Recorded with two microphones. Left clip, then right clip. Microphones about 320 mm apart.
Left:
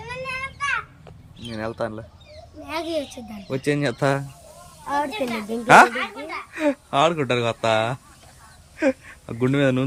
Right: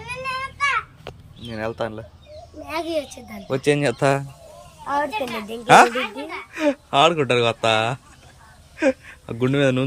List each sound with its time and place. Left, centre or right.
0.0 s a sound: centre
1.5 s speech: centre
2.6 s a child's voice: centre
4.9 s a child's voice: centre
5.6 s speech: centre